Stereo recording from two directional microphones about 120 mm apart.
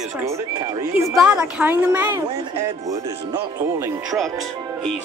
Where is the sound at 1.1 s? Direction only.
10° right (ahead or behind).